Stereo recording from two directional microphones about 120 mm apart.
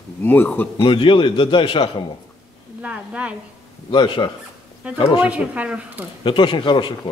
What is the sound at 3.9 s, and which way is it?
Speech, 45° left (ahead or behind).